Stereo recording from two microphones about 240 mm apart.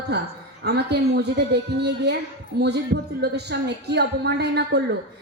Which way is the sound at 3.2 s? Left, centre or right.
Right.